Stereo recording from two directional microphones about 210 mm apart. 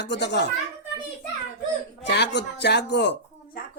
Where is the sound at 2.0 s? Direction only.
55° left (ahead or behind).